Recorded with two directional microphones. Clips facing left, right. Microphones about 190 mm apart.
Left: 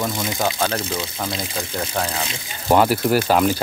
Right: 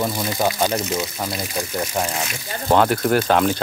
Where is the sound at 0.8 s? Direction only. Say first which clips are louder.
Right 2 dB; 30° left (ahead or behind).